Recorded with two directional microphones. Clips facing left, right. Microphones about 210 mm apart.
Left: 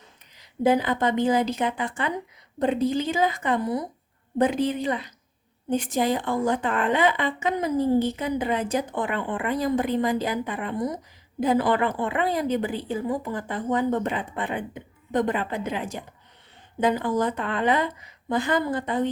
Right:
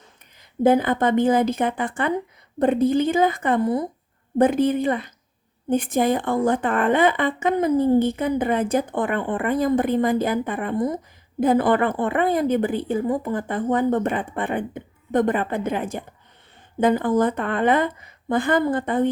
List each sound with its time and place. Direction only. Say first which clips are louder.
0.3 s a woman's voice: right 4 dB; 50° right (ahead or behind)